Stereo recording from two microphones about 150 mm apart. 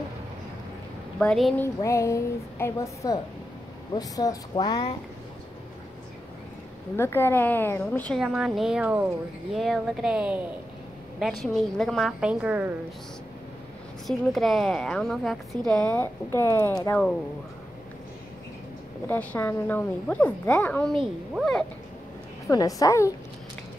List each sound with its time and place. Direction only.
1.2 s a woman's voice: 5° left (ahead or behind)
1.6 s a woman's voice: 20° left (ahead or behind)
7.0 s a woman's voice: 15° left (ahead or behind)
8.2 s a woman's voice: 5° right (ahead or behind)
14.0 s a woman's voice: centre (ahead or behind); by 16.7 s 15° left (ahead or behind)
19.0 s a woman's voice: 15° left (ahead or behind)
22.5 s a woman's voice: 25° left (ahead or behind)